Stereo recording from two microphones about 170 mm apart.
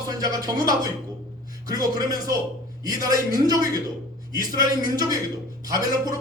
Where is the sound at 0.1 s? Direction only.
20° right (ahead or behind).